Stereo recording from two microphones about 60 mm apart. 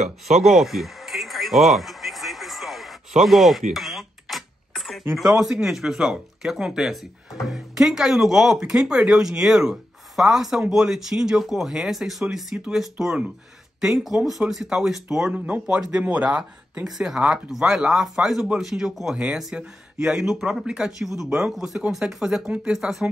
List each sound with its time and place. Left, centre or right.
0.4 s a sound: centre
5.1 s speech: centre
13.7 s speech: centre
15.3 s speech: right; by 23.0 s centre